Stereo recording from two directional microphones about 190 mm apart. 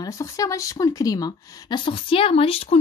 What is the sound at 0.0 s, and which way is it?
A woman's voice, 15° left (ahead or behind).